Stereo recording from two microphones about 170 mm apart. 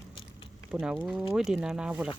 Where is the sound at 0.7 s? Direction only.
5° right (ahead or behind).